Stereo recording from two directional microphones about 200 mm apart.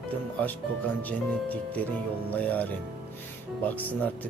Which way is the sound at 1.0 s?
10° left (ahead or behind).